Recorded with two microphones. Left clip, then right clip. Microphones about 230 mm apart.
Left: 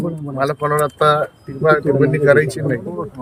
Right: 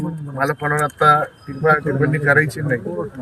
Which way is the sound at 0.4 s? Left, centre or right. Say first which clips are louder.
Left 2 dB; left.